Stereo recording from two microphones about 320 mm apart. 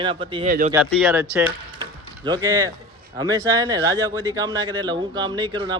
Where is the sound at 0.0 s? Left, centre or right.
Centre.